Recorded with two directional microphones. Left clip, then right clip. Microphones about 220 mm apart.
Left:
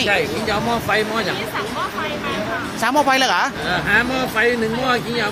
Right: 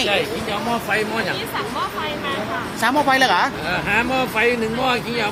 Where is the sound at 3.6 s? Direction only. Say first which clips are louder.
Left 2 dB; 5° left (ahead or behind).